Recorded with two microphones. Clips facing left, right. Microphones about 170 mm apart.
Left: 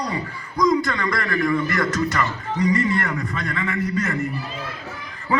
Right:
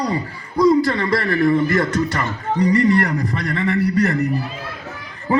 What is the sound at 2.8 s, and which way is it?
Speech, 70° right (ahead or behind).